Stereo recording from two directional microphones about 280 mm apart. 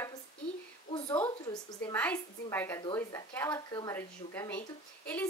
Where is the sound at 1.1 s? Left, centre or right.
Centre.